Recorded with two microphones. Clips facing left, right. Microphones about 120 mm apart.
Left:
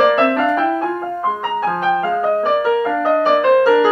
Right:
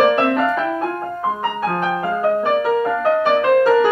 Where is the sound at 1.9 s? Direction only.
5° right (ahead or behind).